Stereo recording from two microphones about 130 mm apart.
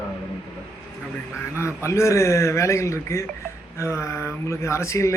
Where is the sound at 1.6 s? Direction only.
20° left (ahead or behind).